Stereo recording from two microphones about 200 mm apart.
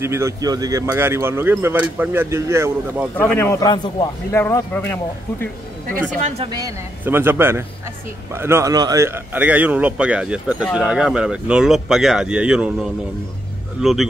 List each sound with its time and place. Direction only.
0.0 s speech: 15° right (ahead or behind)
3.2 s a man's voice: 10° left (ahead or behind)
6.2 s speech: 30° right (ahead or behind)
6.5 s speech: 15° right (ahead or behind)